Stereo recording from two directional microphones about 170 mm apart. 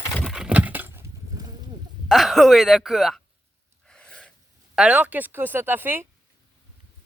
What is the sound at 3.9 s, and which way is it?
Gasp, 5° left (ahead or behind).